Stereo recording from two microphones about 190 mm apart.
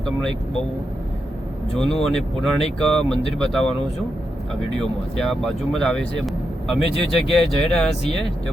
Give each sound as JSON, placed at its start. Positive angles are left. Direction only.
{"t": 0.0, "sound": "speech", "side_deg": 0}
{"t": 1.7, "sound": "speech", "side_deg": 5}
{"t": 4.8, "sound": "speech", "side_deg": 0}